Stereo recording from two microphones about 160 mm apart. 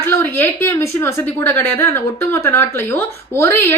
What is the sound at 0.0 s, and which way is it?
A woman's voice, 15° left (ahead or behind).